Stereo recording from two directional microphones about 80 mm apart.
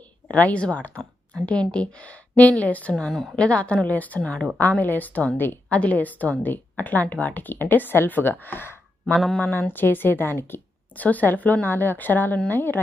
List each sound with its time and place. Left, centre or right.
0.3 s speech: centre
2.9 s a woman's voice: centre; by 9.1 s left
9.1 s a woman's voice: centre
9.4 s a woman's voice: left